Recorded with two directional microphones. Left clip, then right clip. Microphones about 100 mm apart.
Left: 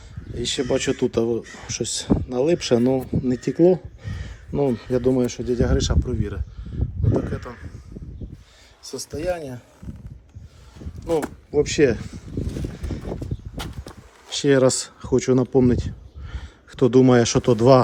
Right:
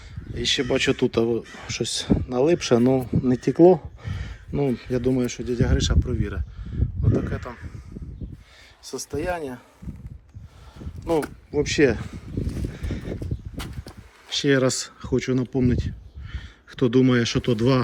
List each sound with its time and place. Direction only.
0.3 s speech: 45° left (ahead or behind)
0.6 s speech: 20° left (ahead or behind)
3.0 s speech: 5° left (ahead or behind)
4.0 s speech: 20° left (ahead or behind); by 6.1 s 60° left (ahead or behind)
6.1 s speech: 30° left (ahead or behind)
6.7 s a sound: 15° left (ahead or behind)
9.0 s speech: centre (ahead or behind)
11.5 s speech: 40° left (ahead or behind)
11.9 s speech: centre (ahead or behind)
12.7 s clip-clop: 15° left (ahead or behind)
14.3 s speech: 50° left (ahead or behind)
15.1 s speech: 90° left
16.3 s speech: 50° left (ahead or behind); by 17.7 s 70° left (ahead or behind)